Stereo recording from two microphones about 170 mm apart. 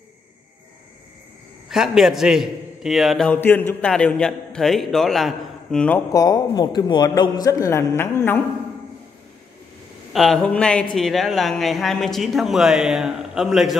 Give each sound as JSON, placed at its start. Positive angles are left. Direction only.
{"t": 1.7, "sound": "a man's voice", "side_deg": 0}
{"t": 6.1, "sound": "a man's voice", "side_deg": 20}
{"t": 10.1, "sound": "a man's voice", "side_deg": 0}